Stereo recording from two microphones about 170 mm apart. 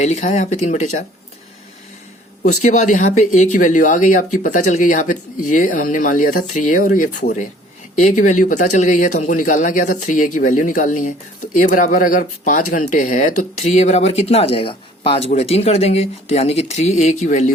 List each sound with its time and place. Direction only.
0.0 s speech: 45° left (ahead or behind)
2.5 s speech: 45° left (ahead or behind)